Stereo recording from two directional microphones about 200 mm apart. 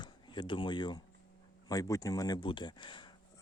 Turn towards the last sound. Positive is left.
turn(degrees=25)  # may be behind; listen again after turning